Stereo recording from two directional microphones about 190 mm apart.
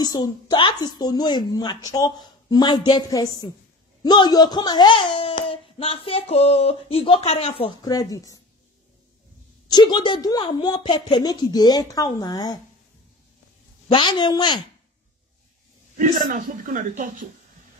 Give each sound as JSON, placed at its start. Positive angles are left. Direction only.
{"t": 0.0, "sound": "a child's voice", "side_deg": 20}
{"t": 7.6, "sound": "a child's voice", "side_deg": 20}
{"t": 9.7, "sound": "a child's voice", "side_deg": 20}
{"t": 13.8, "sound": "a child's voice", "side_deg": 25}
{"t": 16.0, "sound": "a man's voice", "side_deg": -45}